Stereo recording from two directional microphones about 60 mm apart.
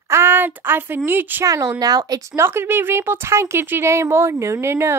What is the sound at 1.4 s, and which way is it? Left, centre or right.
Speech, right.